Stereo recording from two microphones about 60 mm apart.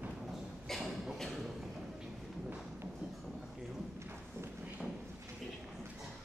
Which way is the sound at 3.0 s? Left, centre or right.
Centre.